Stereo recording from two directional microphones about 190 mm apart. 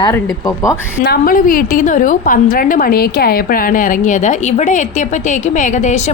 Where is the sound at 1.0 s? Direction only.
50° left (ahead or behind).